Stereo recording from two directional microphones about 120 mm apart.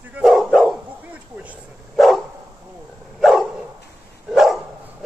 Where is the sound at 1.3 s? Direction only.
10° right (ahead or behind).